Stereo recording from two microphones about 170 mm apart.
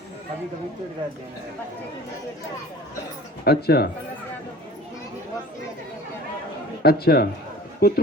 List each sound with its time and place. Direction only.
3.4 s speech: 70° left (ahead or behind)
6.8 s a man's voice: 65° left (ahead or behind)